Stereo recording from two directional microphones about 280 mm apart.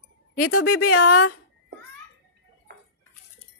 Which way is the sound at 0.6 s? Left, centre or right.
Left.